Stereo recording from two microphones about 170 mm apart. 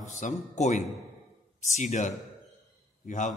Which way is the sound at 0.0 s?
45° left (ahead or behind).